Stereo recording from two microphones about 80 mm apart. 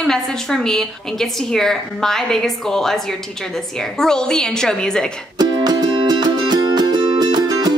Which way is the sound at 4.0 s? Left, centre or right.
Centre.